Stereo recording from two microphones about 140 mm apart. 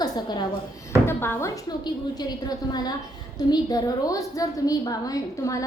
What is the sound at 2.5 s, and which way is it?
A woman's voice, 30° left (ahead or behind).